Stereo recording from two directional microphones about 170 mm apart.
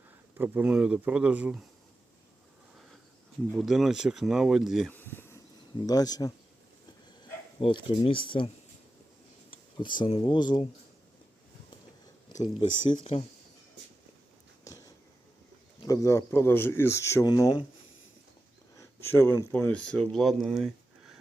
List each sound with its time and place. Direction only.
0.3 s speech: 10° right (ahead or behind)
3.5 s speech: centre (ahead or behind)
4.9 s a sound: 10° left (ahead or behind)
5.8 s speech: 20° left (ahead or behind)
7.6 s speech: 35° left (ahead or behind)
9.8 s speech: 25° left (ahead or behind)
12.9 s speech: 30° left (ahead or behind)
14.6 s a sound: 20° left (ahead or behind)
15.8 s speech: 20° left (ahead or behind)
18.8 s speech: 15° left (ahead or behind); by 21.2 s centre (ahead or behind)